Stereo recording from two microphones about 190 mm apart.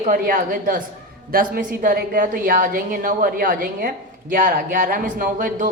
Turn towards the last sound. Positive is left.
turn(degrees=-45)  # may be behind; listen again after turning